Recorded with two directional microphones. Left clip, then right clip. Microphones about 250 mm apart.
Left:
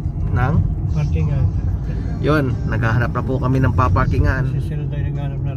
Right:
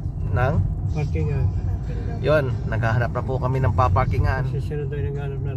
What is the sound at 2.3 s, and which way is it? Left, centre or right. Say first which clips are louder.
Speech: left 1 dB; centre.